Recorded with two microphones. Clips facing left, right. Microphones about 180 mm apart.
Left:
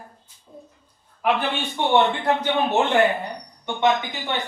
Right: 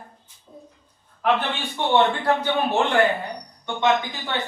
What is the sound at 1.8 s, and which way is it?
A man's voice, 20° left (ahead or behind).